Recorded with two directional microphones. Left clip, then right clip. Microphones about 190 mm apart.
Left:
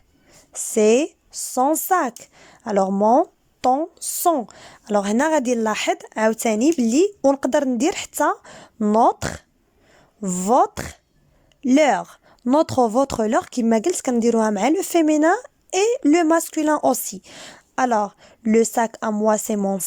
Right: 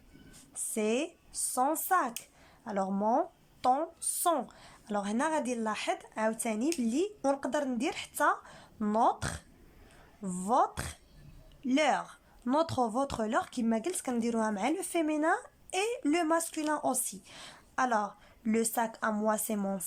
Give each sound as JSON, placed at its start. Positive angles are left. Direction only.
{"t": 0.5, "sound": "speech", "side_deg": 40}